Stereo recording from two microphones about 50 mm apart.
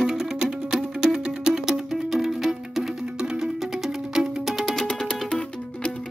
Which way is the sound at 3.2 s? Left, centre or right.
Centre.